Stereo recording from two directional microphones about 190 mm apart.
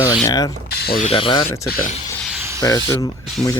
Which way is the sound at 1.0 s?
30° left (ahead or behind).